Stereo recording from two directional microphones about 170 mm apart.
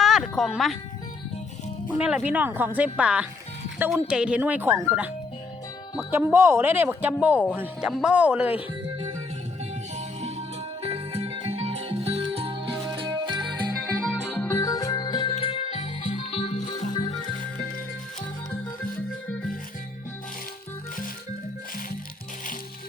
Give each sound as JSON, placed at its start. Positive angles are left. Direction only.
{"t": 0.0, "sound": "music", "side_deg": 0}
{"t": 2.0, "sound": "speech", "side_deg": -5}
{"t": 9.9, "sound": "music", "side_deg": -40}
{"t": 14.3, "sound": "music", "side_deg": 10}